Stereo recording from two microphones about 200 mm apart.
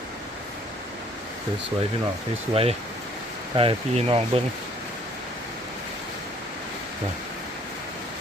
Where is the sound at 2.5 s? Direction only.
30° right (ahead or behind).